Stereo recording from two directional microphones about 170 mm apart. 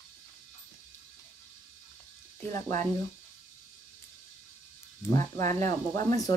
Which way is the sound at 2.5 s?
15° left (ahead or behind).